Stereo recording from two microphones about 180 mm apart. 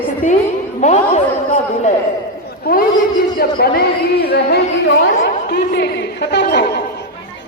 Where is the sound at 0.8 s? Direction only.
40° left (ahead or behind).